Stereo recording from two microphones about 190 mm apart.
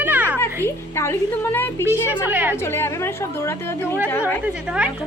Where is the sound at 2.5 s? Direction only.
15° left (ahead or behind).